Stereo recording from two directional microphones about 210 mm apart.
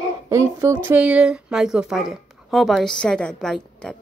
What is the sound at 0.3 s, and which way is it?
Speech, 15° right (ahead or behind).